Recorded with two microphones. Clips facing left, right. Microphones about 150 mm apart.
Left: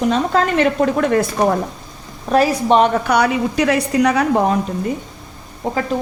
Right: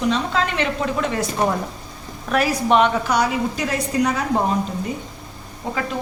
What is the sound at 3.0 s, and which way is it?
A woman's voice, 65° left (ahead or behind).